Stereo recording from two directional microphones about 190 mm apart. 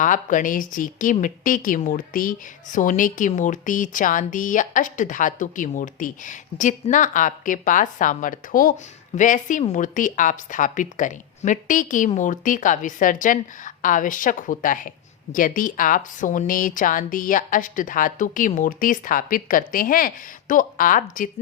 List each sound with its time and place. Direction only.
0.0 s a woman's voice: 45° left (ahead or behind)